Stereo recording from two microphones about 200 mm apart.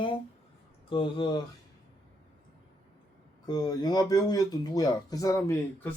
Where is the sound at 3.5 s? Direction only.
20° left (ahead or behind).